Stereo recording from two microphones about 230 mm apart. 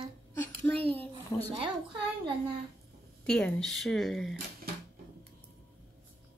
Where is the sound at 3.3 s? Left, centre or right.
Centre.